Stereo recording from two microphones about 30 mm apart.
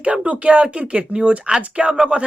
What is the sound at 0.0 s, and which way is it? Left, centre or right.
Speech, right.